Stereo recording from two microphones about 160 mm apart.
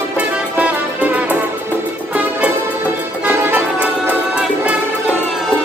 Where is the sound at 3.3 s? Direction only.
15° right (ahead or behind).